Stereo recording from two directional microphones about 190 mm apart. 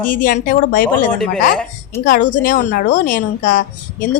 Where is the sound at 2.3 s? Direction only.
45° left (ahead or behind).